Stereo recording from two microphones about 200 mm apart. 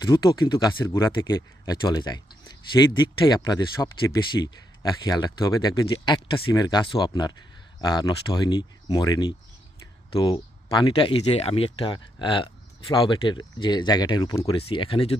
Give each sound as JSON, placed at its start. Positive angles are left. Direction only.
{"t": 0.0, "sound": "speech", "side_deg": 20}